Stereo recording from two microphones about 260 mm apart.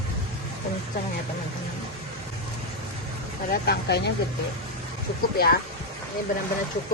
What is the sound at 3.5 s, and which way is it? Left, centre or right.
Speech, left.